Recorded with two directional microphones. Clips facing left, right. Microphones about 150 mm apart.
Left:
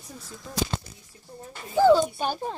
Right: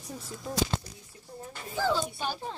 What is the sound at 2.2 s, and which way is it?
Speech, 45° left (ahead or behind).